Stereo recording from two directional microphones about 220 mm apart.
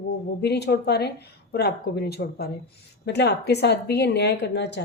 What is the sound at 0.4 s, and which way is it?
Speech, 50° left (ahead or behind).